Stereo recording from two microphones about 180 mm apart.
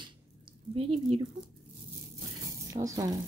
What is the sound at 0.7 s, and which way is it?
Speech, 30° right (ahead or behind).